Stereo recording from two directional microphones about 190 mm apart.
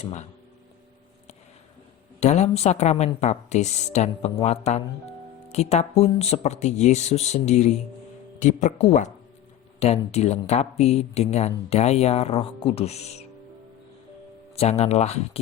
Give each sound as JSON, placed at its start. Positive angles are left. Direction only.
{"t": 2.2, "sound": "speech", "side_deg": 35}
{"t": 14.5, "sound": "speech", "side_deg": 35}